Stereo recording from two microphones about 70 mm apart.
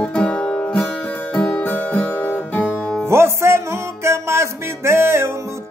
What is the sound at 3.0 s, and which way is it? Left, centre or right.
Music, right.